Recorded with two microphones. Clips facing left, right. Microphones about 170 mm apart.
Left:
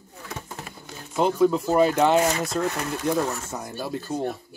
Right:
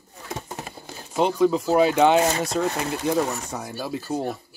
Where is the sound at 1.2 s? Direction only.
Centre (ahead or behind).